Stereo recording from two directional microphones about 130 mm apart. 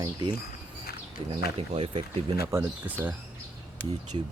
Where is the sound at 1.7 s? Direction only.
45° right (ahead or behind).